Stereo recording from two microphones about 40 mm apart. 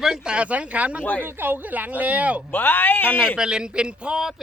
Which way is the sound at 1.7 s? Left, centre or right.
Right.